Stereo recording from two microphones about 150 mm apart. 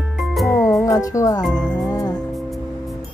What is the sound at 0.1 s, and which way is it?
Music, centre (ahead or behind).